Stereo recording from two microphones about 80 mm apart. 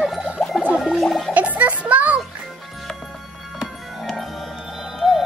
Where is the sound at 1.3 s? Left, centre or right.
Centre.